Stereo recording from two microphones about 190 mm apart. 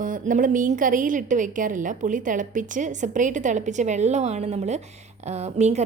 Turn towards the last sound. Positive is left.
turn(degrees=-35)  # may be behind; listen again after turning